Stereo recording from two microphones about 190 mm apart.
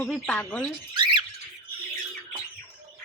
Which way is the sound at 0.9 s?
25° right (ahead or behind).